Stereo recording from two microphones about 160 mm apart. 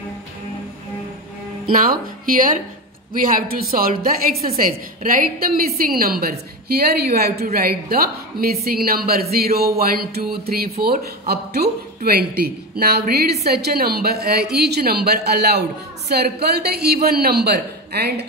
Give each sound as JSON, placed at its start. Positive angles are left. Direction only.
{"t": 1.7, "sound": "a man's voice", "side_deg": -60}